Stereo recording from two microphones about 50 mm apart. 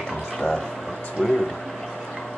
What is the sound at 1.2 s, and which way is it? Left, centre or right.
Speech, centre.